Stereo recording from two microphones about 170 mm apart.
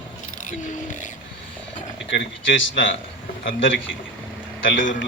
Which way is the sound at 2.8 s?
90° left.